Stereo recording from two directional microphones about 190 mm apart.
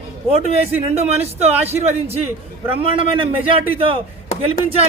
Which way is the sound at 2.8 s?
30° right (ahead or behind).